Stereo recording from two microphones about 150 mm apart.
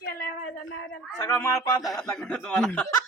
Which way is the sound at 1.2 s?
15° left (ahead or behind).